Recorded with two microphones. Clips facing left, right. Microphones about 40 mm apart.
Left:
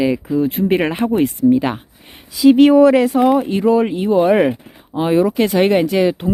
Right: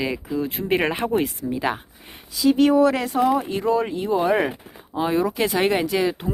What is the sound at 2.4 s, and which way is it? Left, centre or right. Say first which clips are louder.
Speech: left 8 dB; left.